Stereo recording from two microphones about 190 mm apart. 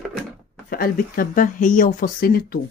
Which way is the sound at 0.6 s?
50° left (ahead or behind).